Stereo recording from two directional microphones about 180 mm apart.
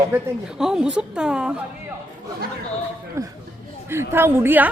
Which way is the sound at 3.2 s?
15° right (ahead or behind).